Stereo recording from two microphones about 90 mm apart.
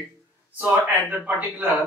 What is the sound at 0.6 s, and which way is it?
A man's voice, 15° right (ahead or behind).